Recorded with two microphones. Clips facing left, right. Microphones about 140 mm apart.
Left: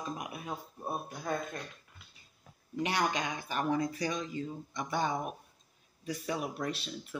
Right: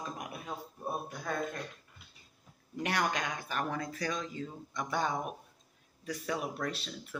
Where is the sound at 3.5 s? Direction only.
15° left (ahead or behind).